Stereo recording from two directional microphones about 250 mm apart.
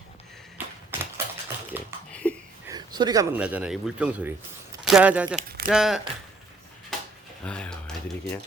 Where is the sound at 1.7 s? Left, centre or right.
Centre.